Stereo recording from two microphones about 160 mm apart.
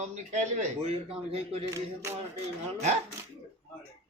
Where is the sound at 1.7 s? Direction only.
15° right (ahead or behind).